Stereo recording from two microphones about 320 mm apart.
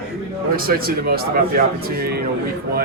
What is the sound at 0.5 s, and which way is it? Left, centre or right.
Speech, right.